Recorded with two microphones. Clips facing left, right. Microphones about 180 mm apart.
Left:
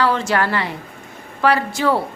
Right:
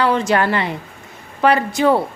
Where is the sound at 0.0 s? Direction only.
20° right (ahead or behind).